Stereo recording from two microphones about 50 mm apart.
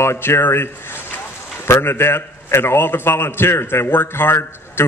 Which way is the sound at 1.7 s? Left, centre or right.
Left.